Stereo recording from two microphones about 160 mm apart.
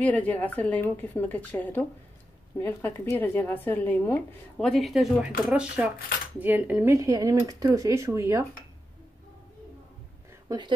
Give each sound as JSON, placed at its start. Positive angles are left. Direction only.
{"t": 0.0, "sound": "speech", "side_deg": 10}